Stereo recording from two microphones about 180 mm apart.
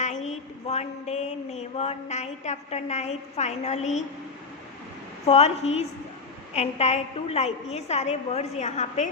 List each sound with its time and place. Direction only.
0.0 s a woman's voice: 40° left (ahead or behind)
5.2 s a woman's voice: 35° left (ahead or behind)